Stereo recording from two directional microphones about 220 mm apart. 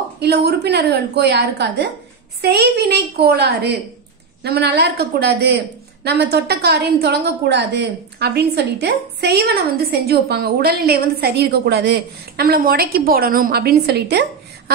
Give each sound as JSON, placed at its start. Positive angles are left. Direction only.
{"t": 0.2, "sound": "a woman's voice", "side_deg": -50}